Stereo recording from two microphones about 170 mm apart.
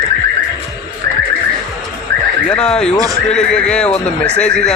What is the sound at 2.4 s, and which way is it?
Speech, 5° left (ahead or behind).